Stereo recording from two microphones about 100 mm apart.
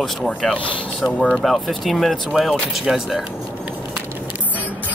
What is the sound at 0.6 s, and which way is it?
Speech, 60° left (ahead or behind).